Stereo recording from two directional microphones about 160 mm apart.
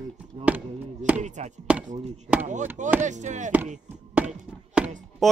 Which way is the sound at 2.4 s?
50° right (ahead or behind).